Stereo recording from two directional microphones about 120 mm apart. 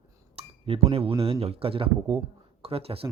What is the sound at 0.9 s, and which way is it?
Speech, 55° right (ahead or behind).